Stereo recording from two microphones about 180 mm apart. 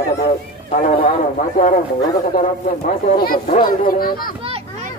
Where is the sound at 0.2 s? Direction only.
45° left (ahead or behind).